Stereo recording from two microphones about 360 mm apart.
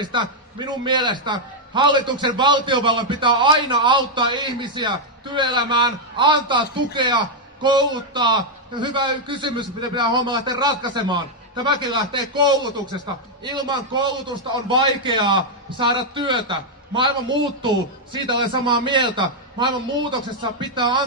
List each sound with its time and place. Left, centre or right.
0.0 s a man's voice: centre